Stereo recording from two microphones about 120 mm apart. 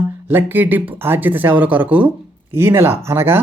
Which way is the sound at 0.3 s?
15° right (ahead or behind).